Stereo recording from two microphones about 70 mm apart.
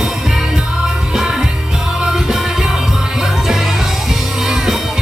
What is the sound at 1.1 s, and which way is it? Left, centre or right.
Music, centre.